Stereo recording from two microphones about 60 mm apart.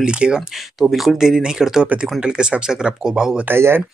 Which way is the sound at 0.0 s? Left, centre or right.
Centre.